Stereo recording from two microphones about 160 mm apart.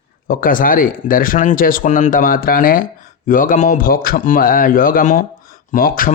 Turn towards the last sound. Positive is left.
turn(degrees=60)  # may be behind; listen again after turning